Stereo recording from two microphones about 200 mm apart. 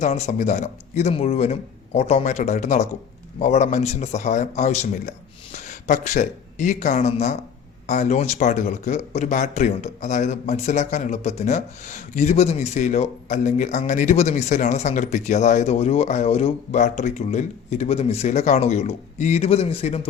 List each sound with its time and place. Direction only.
0.0 s speech: 35° left (ahead or behind)